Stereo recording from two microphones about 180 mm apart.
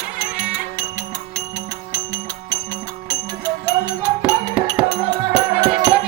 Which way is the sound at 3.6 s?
20° right (ahead or behind).